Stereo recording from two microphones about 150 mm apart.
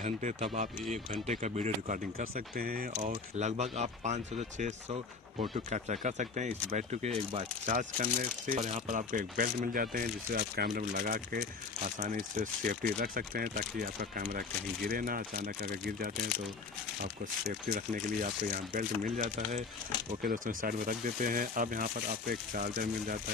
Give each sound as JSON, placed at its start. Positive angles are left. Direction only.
{"t": 0.4, "sound": "speech", "side_deg": -55}
{"t": 2.3, "sound": "speech", "side_deg": -85}
{"t": 3.3, "sound": "speech", "side_deg": -50}
{"t": 8.5, "sound": "speech", "side_deg": -55}
{"t": 10.7, "sound": "speech", "side_deg": -70}
{"t": 12.0, "sound": "speech", "side_deg": -55}
{"t": 13.0, "sound": "speech", "side_deg": -75}
{"t": 14.9, "sound": "speech", "side_deg": -70}
{"t": 17.0, "sound": "speech", "side_deg": -70}
{"t": 20.2, "sound": "speech", "side_deg": -70}